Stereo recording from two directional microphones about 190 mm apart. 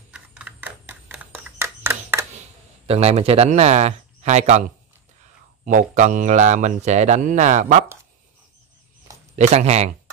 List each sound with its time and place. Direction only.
0.1 s typewriter: 5° right (ahead or behind)
2.9 s speech: 35° right (ahead or behind)
5.7 s speech: 40° right (ahead or behind)
9.3 s speech: 35° right (ahead or behind)